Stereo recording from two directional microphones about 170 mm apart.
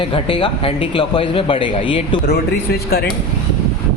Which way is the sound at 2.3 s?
70° left (ahead or behind).